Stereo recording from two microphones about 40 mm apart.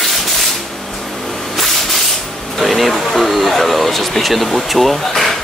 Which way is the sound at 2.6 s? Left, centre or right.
Centre.